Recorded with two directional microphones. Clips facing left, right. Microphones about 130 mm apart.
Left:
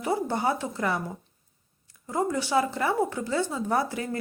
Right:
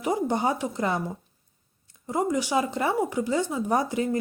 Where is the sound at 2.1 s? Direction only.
20° right (ahead or behind).